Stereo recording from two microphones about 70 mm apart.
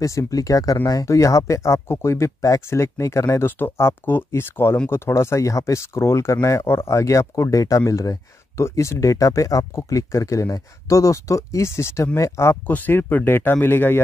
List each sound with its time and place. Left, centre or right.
0.0 s speech: left
12.6 s speech: left